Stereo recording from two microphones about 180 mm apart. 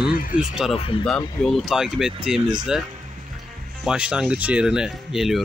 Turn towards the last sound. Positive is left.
turn(degrees=0)  # may be behind; listen again after turning